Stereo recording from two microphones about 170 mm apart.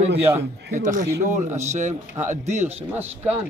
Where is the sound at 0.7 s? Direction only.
45° right (ahead or behind).